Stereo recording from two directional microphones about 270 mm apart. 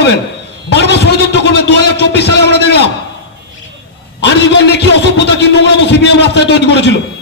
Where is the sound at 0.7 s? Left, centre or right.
Left.